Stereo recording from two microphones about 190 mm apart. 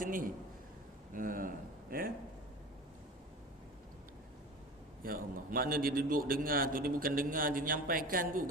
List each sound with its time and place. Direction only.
0.0 s a man's voice: 45° right (ahead or behind)
5.0 s a man's voice: 50° right (ahead or behind)